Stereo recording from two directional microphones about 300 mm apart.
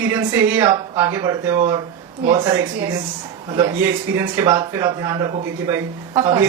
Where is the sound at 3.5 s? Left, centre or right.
Centre.